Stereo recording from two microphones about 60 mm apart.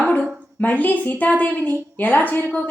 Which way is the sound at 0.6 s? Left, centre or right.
Left.